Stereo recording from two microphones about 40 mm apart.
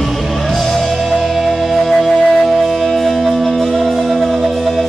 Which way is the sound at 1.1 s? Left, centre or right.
Centre.